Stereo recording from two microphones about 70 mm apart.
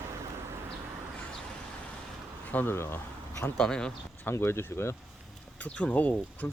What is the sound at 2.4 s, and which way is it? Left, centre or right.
Speech, left.